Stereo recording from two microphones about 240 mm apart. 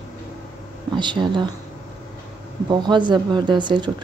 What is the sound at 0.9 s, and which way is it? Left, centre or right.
Speech, centre.